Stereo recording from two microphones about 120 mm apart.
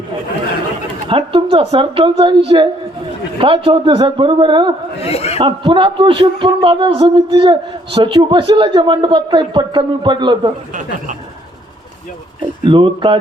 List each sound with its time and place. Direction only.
1.0 s a woman's voice: 45° right (ahead or behind)
5.0 s speech: 55° left (ahead or behind)
5.4 s a woman's voice: 40° right (ahead or behind)
7.0 s a man's voice: 35° right (ahead or behind)
12.4 s a woman's voice: 45° right (ahead or behind)